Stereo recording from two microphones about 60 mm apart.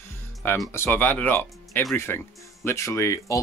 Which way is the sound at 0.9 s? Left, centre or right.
Left.